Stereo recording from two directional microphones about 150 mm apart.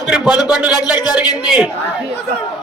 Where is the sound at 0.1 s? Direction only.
5° right (ahead or behind).